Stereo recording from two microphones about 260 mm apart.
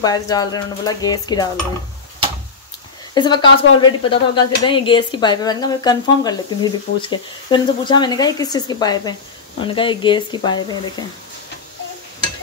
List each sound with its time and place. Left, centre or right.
0.0 s speech: centre
3.2 s speech: centre